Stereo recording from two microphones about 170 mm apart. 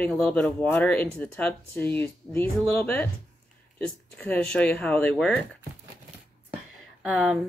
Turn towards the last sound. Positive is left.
turn(degrees=0)  # may be behind; listen again after turning